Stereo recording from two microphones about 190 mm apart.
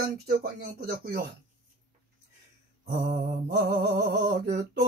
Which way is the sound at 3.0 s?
45° right (ahead or behind).